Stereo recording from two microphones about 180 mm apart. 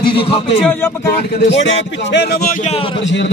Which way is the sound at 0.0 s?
30° left (ahead or behind).